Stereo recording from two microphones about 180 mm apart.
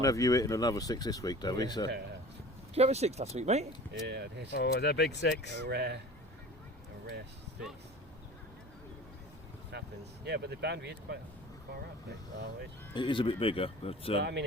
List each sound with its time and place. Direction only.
0.0 s speech: 20° left (ahead or behind)
2.7 s speech: 35° right (ahead or behind)
4.0 s speech: 70° right (ahead or behind)
4.5 s speech: 65° left (ahead or behind)
5.5 s speech: 65° right (ahead or behind)
9.7 s vehicle: 70° right (ahead or behind)
10.2 s speech: 65° right (ahead or behind)
12.9 s speech: 25° left (ahead or behind)
14.2 s speech: 70° right (ahead or behind)